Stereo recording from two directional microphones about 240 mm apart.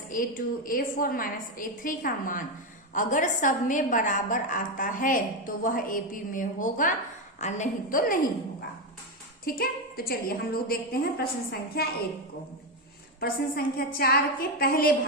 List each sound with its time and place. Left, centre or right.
0.1 s a woman's voice: left
9.4 s a woman's voice: left
13.1 s a woman's voice: left